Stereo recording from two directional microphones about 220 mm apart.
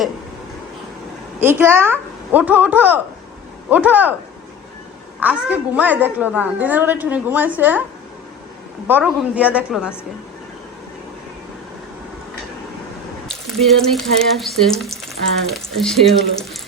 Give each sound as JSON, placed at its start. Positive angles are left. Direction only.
{"t": 1.4, "sound": "a woman's voice", "side_deg": -10}
{"t": 5.2, "sound": "a woman's voice", "side_deg": -5}
{"t": 8.9, "sound": "a woman's voice", "side_deg": -5}
{"t": 13.2, "sound": "a woman's voice", "side_deg": 0}